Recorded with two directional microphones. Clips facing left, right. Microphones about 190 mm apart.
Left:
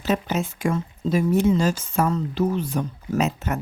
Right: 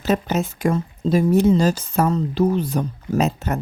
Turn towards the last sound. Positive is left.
turn(degrees=-35)  # may be behind; listen again after turning